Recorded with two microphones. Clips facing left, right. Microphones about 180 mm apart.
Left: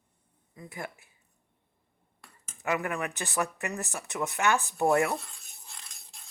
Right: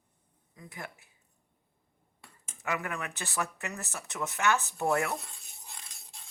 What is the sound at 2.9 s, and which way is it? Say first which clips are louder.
Speech: left 5 dB; 15° left (ahead or behind).